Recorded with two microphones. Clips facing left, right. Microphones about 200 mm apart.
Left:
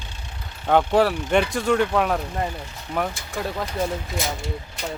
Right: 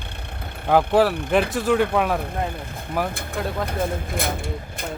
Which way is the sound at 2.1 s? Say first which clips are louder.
Even; 55° right (ahead or behind).